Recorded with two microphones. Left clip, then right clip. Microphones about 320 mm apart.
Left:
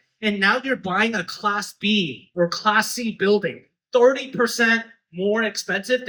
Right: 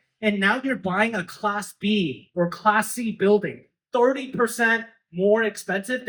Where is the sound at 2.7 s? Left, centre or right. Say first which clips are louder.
Right 2 dB; centre.